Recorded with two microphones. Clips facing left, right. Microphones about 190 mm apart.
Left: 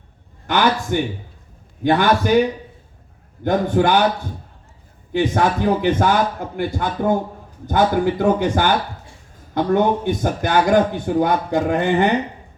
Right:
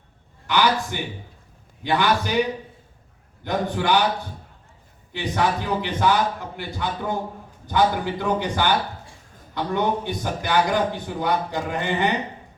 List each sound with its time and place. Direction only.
0.4 s a sound: 50° left (ahead or behind)
1.8 s a man's voice: 50° left (ahead or behind)
3.4 s a man's voice: 50° left (ahead or behind)
5.1 s a man's voice: 50° left (ahead or behind)